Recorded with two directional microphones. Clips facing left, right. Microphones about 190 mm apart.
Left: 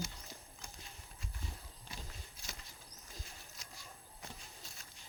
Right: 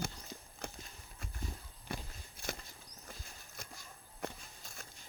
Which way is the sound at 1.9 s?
55° right (ahead or behind).